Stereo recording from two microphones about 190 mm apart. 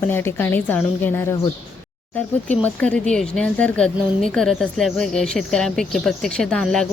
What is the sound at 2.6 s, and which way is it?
A woman's voice, 5° left (ahead or behind).